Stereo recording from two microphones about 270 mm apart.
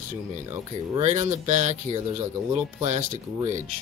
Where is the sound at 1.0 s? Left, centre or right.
Right.